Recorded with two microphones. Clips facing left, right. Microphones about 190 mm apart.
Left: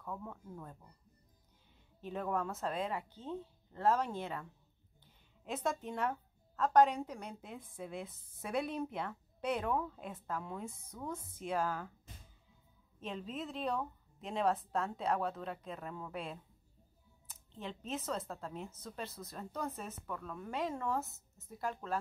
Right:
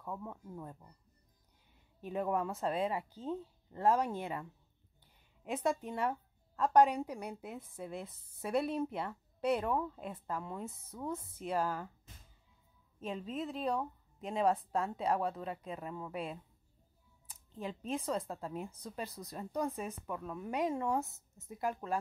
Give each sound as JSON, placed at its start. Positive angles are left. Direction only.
{"t": 0.0, "sound": "speech", "side_deg": -10}
{"t": 2.0, "sound": "speech", "side_deg": -5}
{"t": 3.0, "sound": "speech", "side_deg": -35}
{"t": 3.3, "sound": "a woman's voice", "side_deg": -10}
{"t": 13.0, "sound": "a woman's voice", "side_deg": 0}
{"t": 21.0, "sound": "speech", "side_deg": 0}
{"t": 21.5, "sound": "speech", "side_deg": -15}